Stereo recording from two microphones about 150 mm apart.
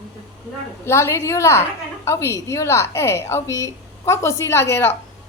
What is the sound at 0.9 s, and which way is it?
A woman's voice, 15° left (ahead or behind).